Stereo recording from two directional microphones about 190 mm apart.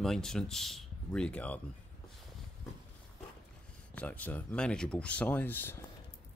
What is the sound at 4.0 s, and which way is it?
Speech, 10° left (ahead or behind).